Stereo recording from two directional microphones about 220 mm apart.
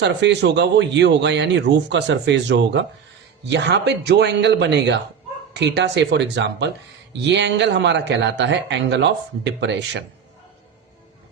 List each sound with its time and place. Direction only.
0.0 s speech: 50° right (ahead or behind)